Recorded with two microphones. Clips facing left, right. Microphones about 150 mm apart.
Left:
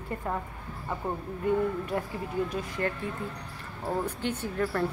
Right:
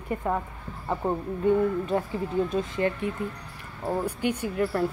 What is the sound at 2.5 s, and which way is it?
Speech, 20° right (ahead or behind).